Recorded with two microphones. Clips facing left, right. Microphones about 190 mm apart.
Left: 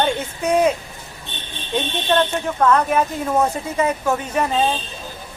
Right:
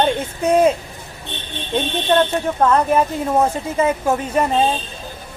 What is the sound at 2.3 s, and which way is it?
Speech, 30° right (ahead or behind).